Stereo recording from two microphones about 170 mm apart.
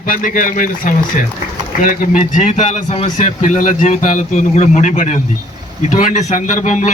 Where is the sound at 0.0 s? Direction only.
50° left (ahead or behind).